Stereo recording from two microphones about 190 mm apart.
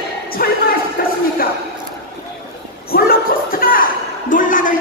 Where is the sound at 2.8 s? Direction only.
50° left (ahead or behind).